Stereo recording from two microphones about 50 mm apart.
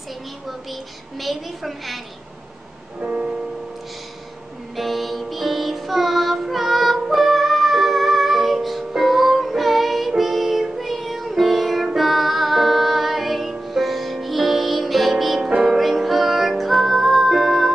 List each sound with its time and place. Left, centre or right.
1.2 s a woman's voice: centre
3.0 s music: right
4.7 s music: centre